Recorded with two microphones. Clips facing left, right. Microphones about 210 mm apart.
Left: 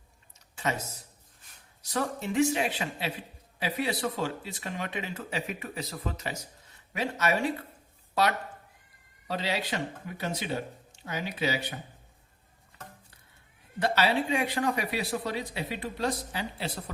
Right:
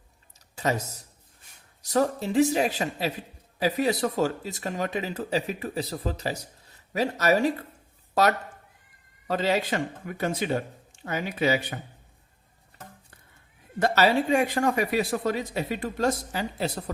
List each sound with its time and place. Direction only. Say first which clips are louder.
0.3 s a sound: right 5 dB; 40° right (ahead or behind)
1.8 s a man's voice: right 7 dB; 40° right (ahead or behind)
13.7 s speech: right 4 dB; 45° right (ahead or behind)